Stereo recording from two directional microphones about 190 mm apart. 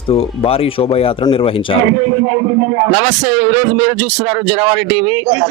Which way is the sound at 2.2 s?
15° right (ahead or behind).